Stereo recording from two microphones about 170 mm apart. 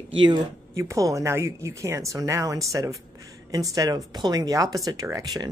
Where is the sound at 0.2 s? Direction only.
20° right (ahead or behind).